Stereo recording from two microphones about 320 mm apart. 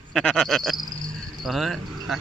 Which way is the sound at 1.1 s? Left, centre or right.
Centre.